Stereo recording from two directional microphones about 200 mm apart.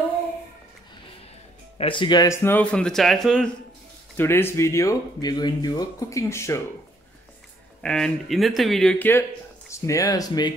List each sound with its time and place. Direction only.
1.8 s speech: 25° left (ahead or behind)
7.8 s speech: 5° left (ahead or behind); by 10.5 s 20° left (ahead or behind)